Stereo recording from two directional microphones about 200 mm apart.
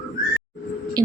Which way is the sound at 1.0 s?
20° right (ahead or behind).